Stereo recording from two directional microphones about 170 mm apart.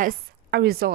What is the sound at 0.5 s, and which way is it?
Speech, 65° right (ahead or behind).